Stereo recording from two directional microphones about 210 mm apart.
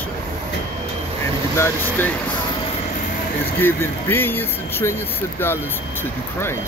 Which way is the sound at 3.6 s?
10° left (ahead or behind).